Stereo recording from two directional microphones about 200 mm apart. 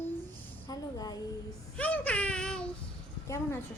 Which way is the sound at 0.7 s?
20° left (ahead or behind).